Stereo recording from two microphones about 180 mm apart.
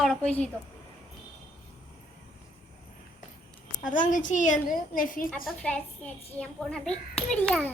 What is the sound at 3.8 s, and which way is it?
A woman's voice, 45° left (ahead or behind).